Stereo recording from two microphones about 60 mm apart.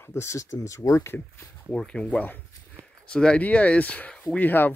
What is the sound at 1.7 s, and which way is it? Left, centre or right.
Speech, centre.